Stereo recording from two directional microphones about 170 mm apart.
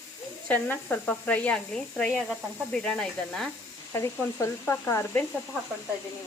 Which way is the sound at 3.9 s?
15° left (ahead or behind).